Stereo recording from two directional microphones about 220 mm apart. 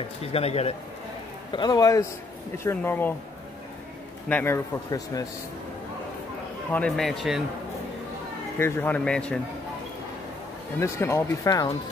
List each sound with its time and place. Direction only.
0.2 s speech: 25° left (ahead or behind); by 3.2 s 10° left (ahead or behind)
4.3 s speech: 10° left (ahead or behind)
6.7 s speech: 5° left (ahead or behind)
8.5 s speech: 10° left (ahead or behind)
10.8 s speech: 10° left (ahead or behind)